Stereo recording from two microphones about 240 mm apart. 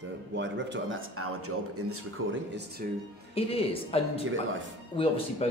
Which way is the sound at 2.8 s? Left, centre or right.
Right.